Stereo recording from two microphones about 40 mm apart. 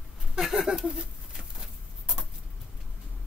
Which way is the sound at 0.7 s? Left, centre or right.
Right.